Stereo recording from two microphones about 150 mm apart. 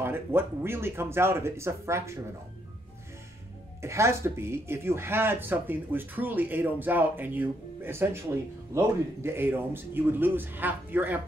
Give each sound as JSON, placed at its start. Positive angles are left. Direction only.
{"t": 0.0, "sound": "speech", "side_deg": -15}
{"t": 3.8, "sound": "speech", "side_deg": -20}